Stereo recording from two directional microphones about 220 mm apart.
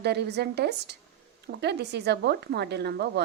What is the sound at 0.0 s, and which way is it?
Speech, 50° right (ahead or behind).